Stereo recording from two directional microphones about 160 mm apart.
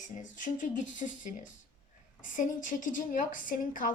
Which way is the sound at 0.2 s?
55° left (ahead or behind).